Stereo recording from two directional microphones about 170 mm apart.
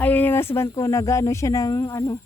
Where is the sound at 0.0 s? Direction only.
10° left (ahead or behind).